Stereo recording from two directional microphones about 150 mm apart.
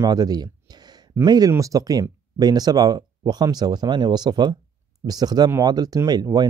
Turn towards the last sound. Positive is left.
turn(degrees=-25)  # may be behind; listen again after turning